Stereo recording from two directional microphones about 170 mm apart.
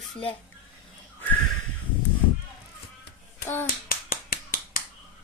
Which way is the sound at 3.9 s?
60° left (ahead or behind).